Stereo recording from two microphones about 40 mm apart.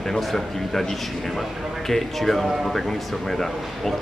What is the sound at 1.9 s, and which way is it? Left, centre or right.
A man's voice, centre.